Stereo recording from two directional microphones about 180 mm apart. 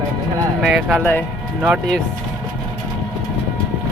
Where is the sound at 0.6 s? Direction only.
5° right (ahead or behind).